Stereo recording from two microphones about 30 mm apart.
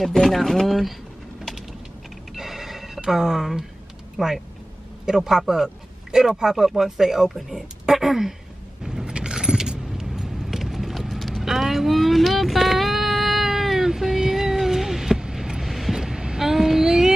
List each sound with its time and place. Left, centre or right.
0.1 s speech: centre
2.3 s telephone bell ringing: centre
3.1 s speech: centre
8.8 s a sound: centre
9.1 s vehicle: right; by 11.3 s centre
11.4 s a sound: centre
15.3 s vehicle: centre
15.6 s vehicle: centre
16.0 s vehicle: right
16.3 s child singing: centre